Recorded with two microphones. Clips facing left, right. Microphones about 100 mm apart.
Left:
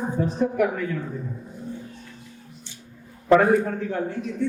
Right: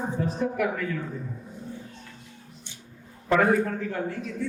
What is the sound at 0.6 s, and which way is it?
Speech, 5° left (ahead or behind).